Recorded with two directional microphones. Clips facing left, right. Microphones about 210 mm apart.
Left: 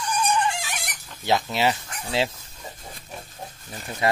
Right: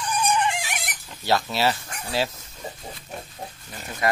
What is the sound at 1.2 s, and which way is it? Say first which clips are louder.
Speech: even; 15° left (ahead or behind).